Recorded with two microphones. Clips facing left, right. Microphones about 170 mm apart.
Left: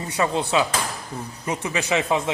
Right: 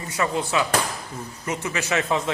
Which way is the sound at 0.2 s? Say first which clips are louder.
Left 2 dB; 20° left (ahead or behind).